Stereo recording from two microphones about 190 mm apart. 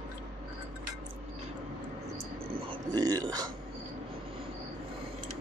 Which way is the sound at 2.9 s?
20° right (ahead or behind).